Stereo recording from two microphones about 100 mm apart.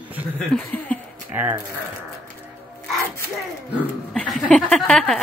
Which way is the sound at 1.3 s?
15° right (ahead or behind).